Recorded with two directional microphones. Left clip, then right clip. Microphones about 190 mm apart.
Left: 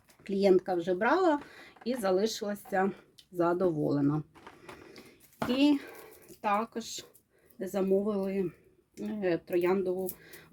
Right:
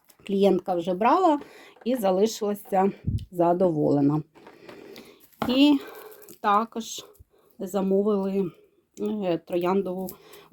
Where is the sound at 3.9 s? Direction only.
25° right (ahead or behind).